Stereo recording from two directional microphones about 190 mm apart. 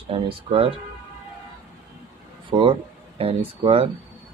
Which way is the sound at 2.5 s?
25° right (ahead or behind).